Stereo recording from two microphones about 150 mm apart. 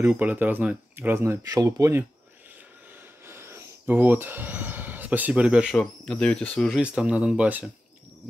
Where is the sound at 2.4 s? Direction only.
10° right (ahead or behind).